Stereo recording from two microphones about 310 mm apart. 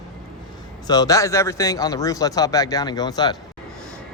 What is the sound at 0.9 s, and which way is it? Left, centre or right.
Speech, centre.